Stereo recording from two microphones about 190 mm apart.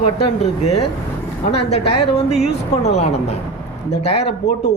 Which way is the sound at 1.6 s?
30° left (ahead or behind).